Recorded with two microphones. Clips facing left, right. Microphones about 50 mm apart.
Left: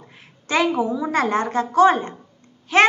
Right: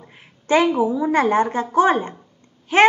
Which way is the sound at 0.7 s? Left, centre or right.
Centre.